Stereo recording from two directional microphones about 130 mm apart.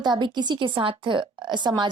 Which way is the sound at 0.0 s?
35° right (ahead or behind).